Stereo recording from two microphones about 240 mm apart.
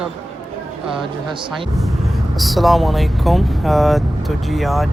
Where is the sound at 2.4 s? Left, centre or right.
Centre.